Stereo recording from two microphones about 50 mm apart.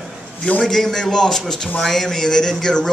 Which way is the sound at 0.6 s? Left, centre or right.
Centre.